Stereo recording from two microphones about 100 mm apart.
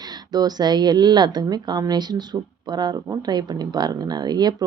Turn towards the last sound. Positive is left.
turn(degrees=-45)  # may be behind; listen again after turning